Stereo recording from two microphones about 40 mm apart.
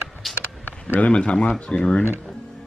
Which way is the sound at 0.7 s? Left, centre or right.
Left.